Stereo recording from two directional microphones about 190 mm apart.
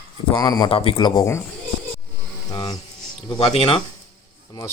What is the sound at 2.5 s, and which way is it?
Speech, 20° left (ahead or behind).